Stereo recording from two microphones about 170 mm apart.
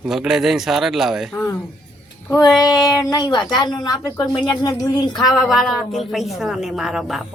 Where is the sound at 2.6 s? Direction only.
20° left (ahead or behind).